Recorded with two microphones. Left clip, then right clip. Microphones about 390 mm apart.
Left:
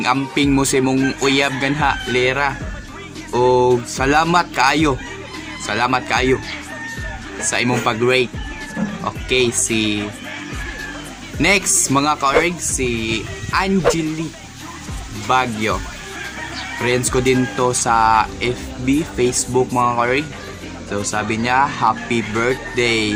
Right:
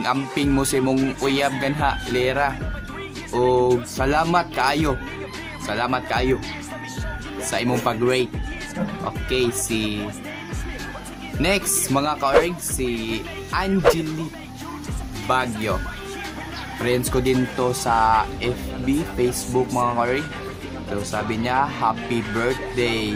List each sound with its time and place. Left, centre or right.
0.0 s speech: right
7.4 s speech: right
9.3 s speech: right
11.4 s speech: right
15.3 s speech: right
16.8 s speech: right